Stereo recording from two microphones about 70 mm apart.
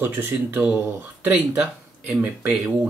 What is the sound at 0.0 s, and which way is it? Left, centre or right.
Speech, right.